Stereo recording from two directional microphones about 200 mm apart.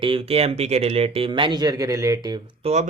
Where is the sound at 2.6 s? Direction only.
30° right (ahead or behind).